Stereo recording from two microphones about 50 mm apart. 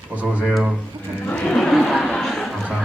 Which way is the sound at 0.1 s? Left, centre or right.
Right.